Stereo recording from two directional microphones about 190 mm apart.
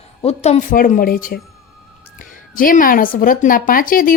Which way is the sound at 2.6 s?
45° left (ahead or behind).